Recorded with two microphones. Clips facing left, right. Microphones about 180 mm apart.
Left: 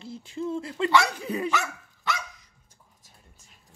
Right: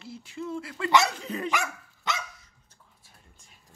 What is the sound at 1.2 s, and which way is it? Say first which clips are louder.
Speech: left 4 dB; 10° left (ahead or behind).